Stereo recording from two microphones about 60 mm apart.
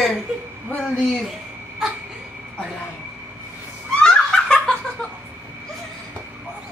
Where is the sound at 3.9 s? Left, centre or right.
Centre.